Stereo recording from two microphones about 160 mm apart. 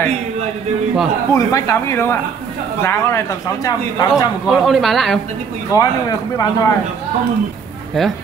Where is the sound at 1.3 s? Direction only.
20° left (ahead or behind).